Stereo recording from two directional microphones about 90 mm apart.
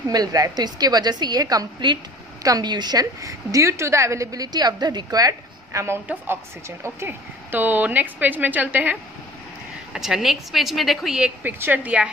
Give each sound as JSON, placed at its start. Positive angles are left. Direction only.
{"t": 0.1, "sound": "a woman's voice", "side_deg": -45}
{"t": 9.9, "sound": "a woman's voice", "side_deg": -5}
{"t": 11.1, "sound": "a woman's voice", "side_deg": -10}